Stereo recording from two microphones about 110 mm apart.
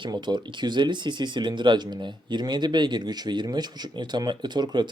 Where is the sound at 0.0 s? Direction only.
40° right (ahead or behind).